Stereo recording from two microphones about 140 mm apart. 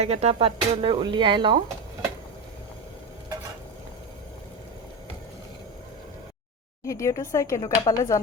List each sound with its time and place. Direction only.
0.0 s speech: 50° right (ahead or behind)
6.8 s speech: 20° left (ahead or behind)